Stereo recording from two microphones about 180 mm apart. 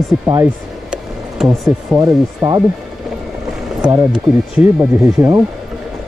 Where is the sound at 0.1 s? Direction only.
10° right (ahead or behind).